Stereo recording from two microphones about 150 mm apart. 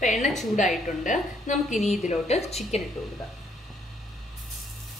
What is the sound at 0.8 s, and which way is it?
A woman's voice, 60° left (ahead or behind).